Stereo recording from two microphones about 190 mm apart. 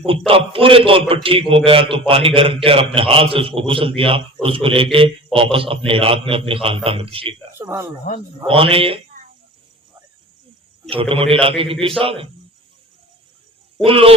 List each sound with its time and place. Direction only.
0.3 s a man's voice: 30° right (ahead or behind)
7.6 s speech: 15° right (ahead or behind)
8.4 s a man's voice: 30° right (ahead or behind)
10.8 s a man's voice: 30° right (ahead or behind)
13.8 s a man's voice: 30° right (ahead or behind)